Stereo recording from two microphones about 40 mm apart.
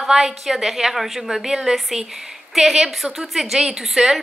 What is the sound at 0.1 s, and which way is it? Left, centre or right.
A woman's voice, centre.